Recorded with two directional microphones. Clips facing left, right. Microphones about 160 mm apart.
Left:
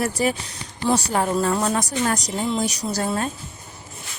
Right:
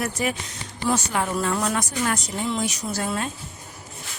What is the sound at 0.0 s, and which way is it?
Speech, 35° left (ahead or behind).